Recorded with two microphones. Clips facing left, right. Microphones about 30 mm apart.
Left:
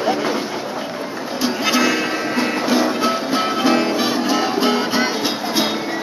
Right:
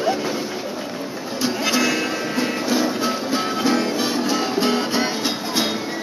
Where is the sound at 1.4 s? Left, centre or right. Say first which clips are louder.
Left 3 dB; centre.